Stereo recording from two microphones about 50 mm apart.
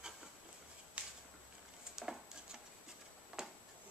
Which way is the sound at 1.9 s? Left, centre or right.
Centre.